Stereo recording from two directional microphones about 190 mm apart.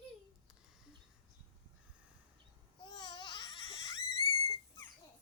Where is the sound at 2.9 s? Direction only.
25° left (ahead or behind).